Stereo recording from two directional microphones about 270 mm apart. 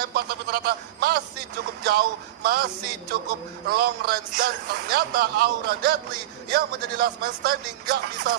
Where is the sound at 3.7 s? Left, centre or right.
Right.